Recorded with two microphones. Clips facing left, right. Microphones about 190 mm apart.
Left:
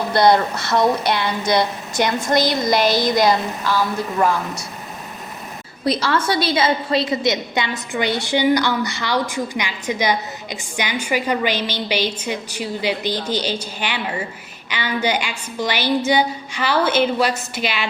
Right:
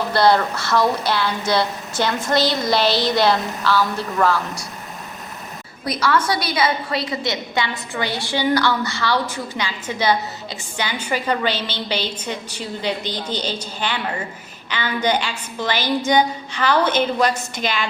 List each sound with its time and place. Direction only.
0.1 s a woman's voice: 20° left (ahead or behind)
5.8 s a woman's voice: 25° left (ahead or behind); by 17.8 s 5° left (ahead or behind)